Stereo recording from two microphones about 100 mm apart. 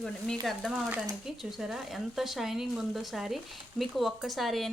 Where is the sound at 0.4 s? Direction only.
Centre (ahead or behind).